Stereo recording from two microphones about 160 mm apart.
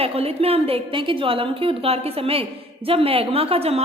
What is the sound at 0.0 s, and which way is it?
A woman's voice, 40° right (ahead or behind).